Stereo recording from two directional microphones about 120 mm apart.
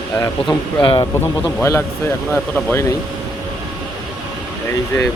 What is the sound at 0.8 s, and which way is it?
Speech, 45° left (ahead or behind).